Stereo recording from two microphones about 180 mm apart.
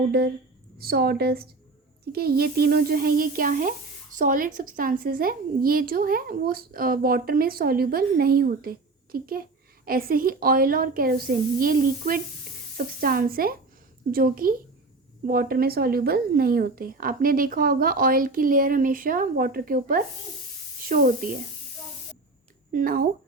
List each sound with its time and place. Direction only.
0.8 s speech: 60° right (ahead or behind)
22.7 s speech: 55° right (ahead or behind)